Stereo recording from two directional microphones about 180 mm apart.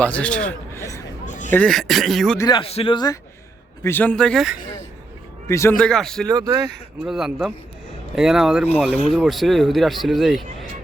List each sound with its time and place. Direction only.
0.0 s a man's voice: 5° left (ahead or behind)
1.2 s a sound: 45° left (ahead or behind)
1.5 s speech: 5° left (ahead or behind)
2.4 s a man's voice: 25° left (ahead or behind)
3.8 s speech: 10° left (ahead or behind)
5.5 s a man's voice: 15° left (ahead or behind)
5.7 s speech: 5° left (ahead or behind)
6.2 s speech: 20° right (ahead or behind)
6.7 s speech: centre (ahead or behind)